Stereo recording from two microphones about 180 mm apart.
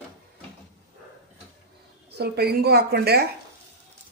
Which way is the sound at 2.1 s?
65° right (ahead or behind).